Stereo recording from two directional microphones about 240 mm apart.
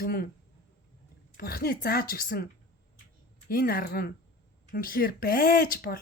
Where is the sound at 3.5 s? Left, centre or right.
Left.